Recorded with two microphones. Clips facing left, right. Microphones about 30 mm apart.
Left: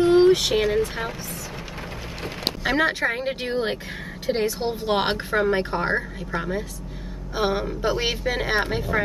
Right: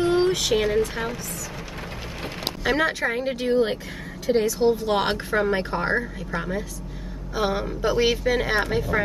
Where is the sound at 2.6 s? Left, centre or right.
Centre.